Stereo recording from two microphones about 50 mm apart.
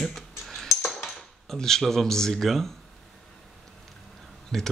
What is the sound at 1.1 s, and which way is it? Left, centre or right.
Speech, centre.